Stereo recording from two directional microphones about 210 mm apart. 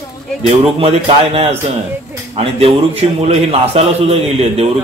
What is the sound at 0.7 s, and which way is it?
A man's voice, 30° right (ahead or behind).